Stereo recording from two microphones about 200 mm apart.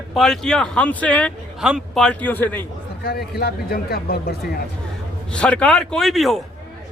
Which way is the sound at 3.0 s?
50° left (ahead or behind).